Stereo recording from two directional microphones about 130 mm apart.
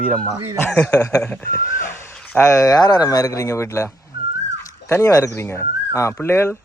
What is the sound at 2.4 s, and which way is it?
Speech, 25° left (ahead or behind).